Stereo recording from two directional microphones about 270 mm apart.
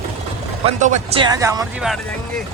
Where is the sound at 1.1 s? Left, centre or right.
Centre.